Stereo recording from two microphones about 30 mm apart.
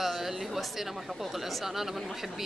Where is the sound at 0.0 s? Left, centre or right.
Centre.